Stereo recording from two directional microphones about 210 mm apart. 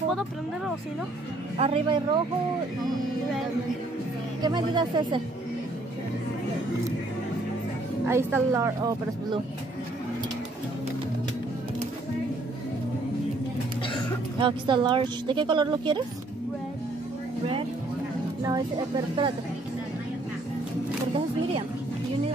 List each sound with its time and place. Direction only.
1.6 s a woman's voice: 25° right (ahead or behind)
4.4 s a woman's voice: 20° right (ahead or behind)
8.1 s a woman's voice: 10° right (ahead or behind)
14.4 s a woman's voice: 20° right (ahead or behind)
18.4 s a woman's voice: 20° right (ahead or behind)